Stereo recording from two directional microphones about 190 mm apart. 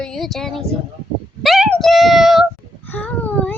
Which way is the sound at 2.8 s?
10° left (ahead or behind).